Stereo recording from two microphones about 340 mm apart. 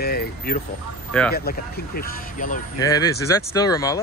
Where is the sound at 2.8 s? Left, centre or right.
Centre.